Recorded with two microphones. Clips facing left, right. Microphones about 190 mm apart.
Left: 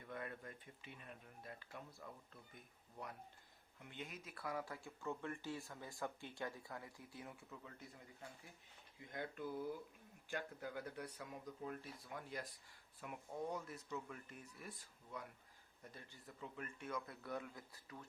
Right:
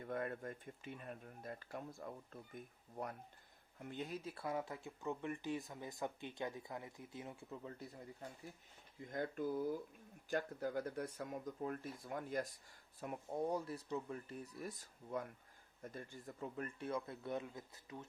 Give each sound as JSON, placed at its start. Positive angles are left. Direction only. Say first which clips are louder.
{"t": 0.0, "sound": "speech", "louder": "right 7 dB", "side_deg": -45}
{"t": 3.8, "sound": "speech", "louder": "right 7 dB", "side_deg": -40}
{"t": 13.0, "sound": "speech", "louder": "right 6 dB", "side_deg": -35}
{"t": 16.8, "sound": "speech", "louder": "right 4 dB", "side_deg": -30}